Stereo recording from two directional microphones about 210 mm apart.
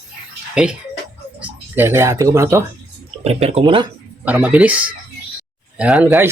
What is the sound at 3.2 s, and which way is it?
Speech, 30° right (ahead or behind).